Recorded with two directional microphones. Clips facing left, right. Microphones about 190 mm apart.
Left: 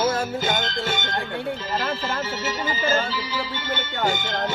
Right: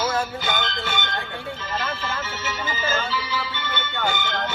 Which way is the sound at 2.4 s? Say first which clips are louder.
Left 3 dB; 40° left (ahead or behind).